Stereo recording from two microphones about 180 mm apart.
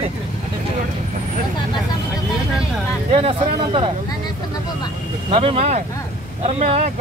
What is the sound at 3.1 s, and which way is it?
Speech, 30° right (ahead or behind).